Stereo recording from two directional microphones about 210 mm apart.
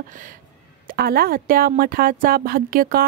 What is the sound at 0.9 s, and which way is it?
Speech, 45° right (ahead or behind).